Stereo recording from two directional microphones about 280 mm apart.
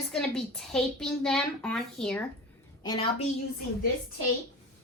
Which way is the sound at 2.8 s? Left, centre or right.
Centre.